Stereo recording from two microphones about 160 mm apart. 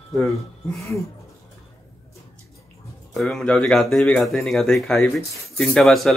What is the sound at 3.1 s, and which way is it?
Speech, centre (ahead or behind).